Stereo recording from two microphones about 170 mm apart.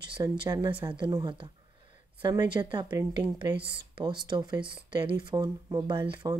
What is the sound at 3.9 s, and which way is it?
Speech, 25° right (ahead or behind).